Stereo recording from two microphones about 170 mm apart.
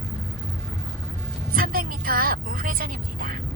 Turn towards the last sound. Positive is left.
turn(degrees=-55)  # may be behind; listen again after turning